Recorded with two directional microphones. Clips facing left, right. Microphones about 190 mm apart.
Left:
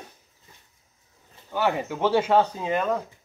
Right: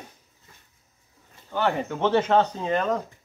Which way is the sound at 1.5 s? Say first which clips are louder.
Even; 10° left (ahead or behind).